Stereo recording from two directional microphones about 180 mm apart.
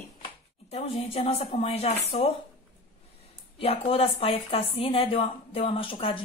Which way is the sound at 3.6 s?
30° left (ahead or behind).